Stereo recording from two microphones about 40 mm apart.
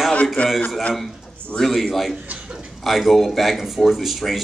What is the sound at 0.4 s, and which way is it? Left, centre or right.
Speech, left.